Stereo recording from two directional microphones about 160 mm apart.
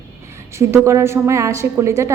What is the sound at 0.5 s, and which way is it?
A woman's voice, 15° right (ahead or behind).